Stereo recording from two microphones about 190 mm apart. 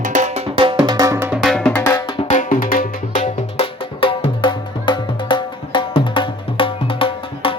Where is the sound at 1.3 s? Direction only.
Centre (ahead or behind).